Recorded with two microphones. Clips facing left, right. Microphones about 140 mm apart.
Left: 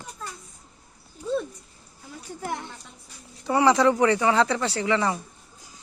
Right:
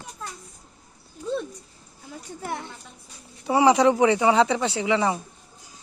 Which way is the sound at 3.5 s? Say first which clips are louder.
Right 2 dB; 10° right (ahead or behind).